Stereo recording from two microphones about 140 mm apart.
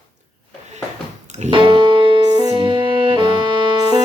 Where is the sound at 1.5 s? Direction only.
35° right (ahead or behind).